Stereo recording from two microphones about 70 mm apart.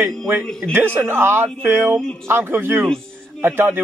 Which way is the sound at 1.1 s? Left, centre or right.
Right.